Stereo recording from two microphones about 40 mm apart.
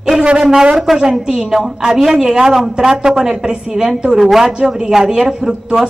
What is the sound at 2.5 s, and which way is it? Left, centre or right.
A man's voice, centre.